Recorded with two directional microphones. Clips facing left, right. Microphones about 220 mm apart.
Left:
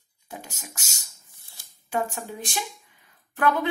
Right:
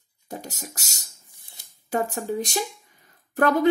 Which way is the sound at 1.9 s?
40° right (ahead or behind).